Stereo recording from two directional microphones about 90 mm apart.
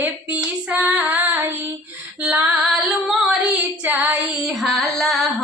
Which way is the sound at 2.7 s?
Centre (ahead or behind).